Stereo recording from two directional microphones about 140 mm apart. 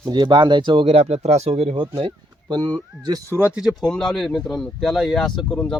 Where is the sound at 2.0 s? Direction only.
30° right (ahead or behind).